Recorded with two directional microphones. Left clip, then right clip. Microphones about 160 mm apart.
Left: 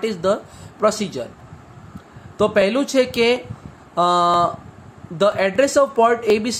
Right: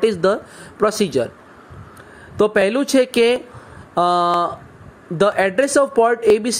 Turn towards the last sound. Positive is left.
turn(degrees=-45)  # may be behind; listen again after turning